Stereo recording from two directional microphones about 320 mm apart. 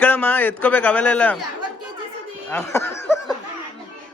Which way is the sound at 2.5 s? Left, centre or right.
Centre.